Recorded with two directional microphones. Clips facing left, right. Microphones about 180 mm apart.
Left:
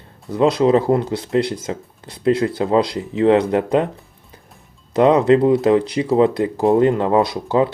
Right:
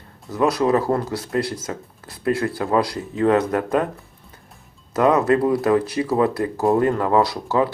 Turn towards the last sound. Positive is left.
turn(degrees=20)  # may be behind; listen again after turning